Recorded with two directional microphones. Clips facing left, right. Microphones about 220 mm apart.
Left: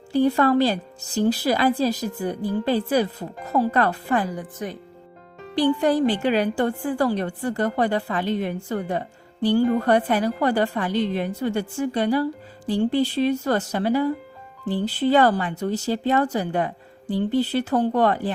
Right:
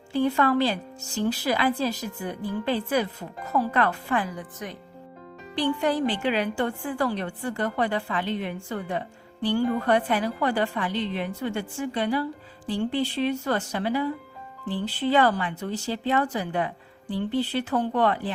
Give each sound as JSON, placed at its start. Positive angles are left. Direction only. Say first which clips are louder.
{"t": 0.1, "sound": "a woman's voice", "louder": "left 4 dB", "side_deg": 40}